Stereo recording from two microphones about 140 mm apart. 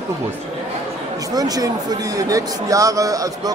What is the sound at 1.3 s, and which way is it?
Speech, 25° right (ahead or behind).